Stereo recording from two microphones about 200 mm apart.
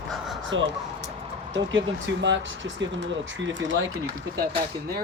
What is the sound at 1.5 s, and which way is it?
Speech, 70° right (ahead or behind).